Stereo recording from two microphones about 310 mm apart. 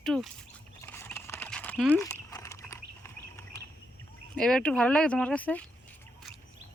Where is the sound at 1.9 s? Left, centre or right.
Centre.